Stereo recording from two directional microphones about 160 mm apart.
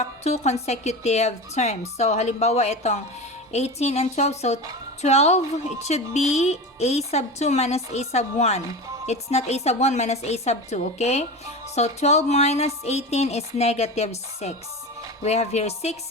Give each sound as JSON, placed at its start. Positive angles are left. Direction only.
{"t": 0.0, "sound": "speech", "side_deg": 45}